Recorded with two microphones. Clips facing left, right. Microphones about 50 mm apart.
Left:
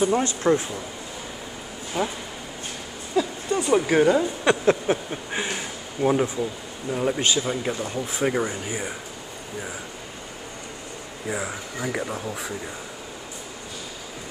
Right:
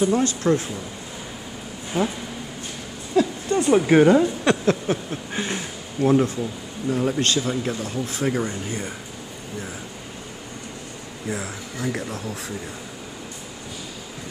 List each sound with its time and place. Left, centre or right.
0.0 s speech: left
2.0 s a woman's voice: centre
3.4 s a sound: centre
3.7 s a woman's voice: centre
4.5 s speech: centre
11.2 s speech: centre